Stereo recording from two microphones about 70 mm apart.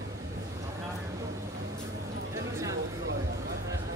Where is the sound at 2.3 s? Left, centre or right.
Right.